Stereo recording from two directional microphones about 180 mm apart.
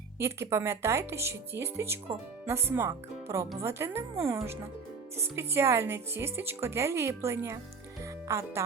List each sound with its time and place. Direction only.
0.2 s a woman's voice: 15° right (ahead or behind)